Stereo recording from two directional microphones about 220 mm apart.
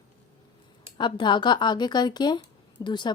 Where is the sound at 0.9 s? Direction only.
20° left (ahead or behind).